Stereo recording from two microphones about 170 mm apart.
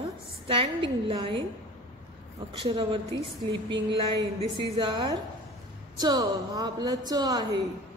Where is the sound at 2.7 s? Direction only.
30° right (ahead or behind).